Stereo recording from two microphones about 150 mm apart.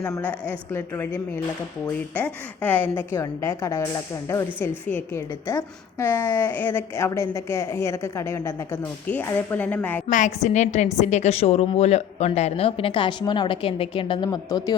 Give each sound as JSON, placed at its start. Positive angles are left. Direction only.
{"t": 0.0, "sound": "a woman's voice", "side_deg": 15}
{"t": 10.1, "sound": "a woman's voice", "side_deg": 55}